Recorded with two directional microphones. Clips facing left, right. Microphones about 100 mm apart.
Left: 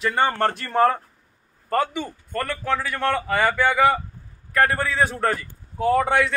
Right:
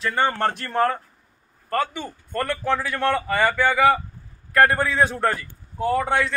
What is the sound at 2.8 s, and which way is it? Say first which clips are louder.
Speech: right 1 dB; centre (ahead or behind).